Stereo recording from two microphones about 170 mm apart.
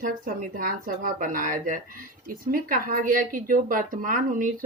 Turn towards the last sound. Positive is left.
turn(degrees=-50)  # may be behind; listen again after turning